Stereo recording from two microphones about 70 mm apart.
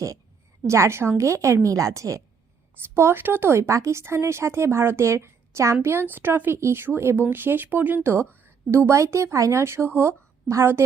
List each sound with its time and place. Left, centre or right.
0.7 s a woman's voice: right
2.9 s speech: right